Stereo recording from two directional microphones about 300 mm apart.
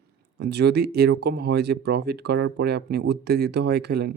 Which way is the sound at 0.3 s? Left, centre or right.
Right.